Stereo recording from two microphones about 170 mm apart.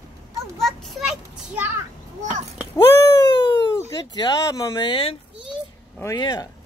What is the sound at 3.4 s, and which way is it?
Speech, 25° left (ahead or behind).